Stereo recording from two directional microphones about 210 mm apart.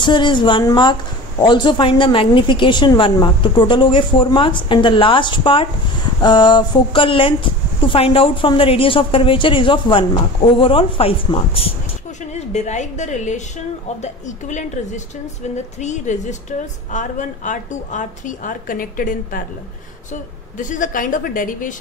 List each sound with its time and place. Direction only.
0.0 s a woman's voice: 20° left (ahead or behind); by 21.7 s 40° left (ahead or behind)